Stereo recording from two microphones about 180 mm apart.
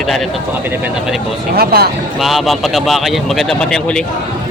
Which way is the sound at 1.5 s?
60° right (ahead or behind).